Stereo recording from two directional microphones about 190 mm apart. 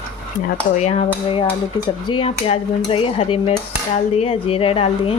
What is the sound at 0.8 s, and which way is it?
Speech, 35° left (ahead or behind).